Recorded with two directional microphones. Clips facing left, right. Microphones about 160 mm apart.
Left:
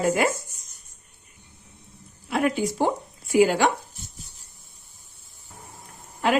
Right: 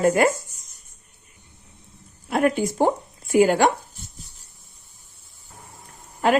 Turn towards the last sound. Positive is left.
turn(degrees=-45)  # may be behind; listen again after turning